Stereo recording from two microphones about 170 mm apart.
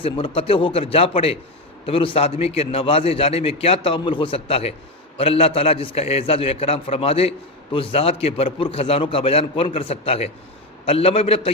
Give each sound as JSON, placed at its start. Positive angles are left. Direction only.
{"t": 0.0, "sound": "a man's voice", "side_deg": 30}